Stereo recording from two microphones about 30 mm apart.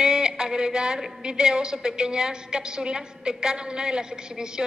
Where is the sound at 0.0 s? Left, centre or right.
Right.